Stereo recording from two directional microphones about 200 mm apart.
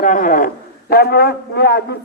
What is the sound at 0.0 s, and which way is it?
Speech, 40° left (ahead or behind).